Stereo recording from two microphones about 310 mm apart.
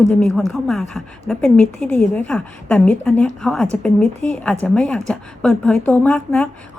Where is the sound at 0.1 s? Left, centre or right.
Centre.